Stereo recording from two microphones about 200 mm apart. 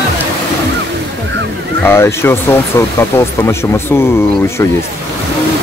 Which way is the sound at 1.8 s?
10° left (ahead or behind).